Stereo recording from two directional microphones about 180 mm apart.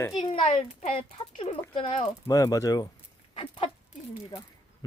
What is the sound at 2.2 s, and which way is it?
Speech, 20° left (ahead or behind).